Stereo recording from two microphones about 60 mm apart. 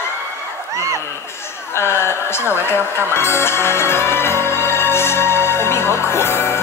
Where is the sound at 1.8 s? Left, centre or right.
Left.